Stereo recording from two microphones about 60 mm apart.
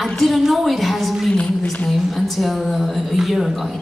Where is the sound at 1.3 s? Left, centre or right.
Left.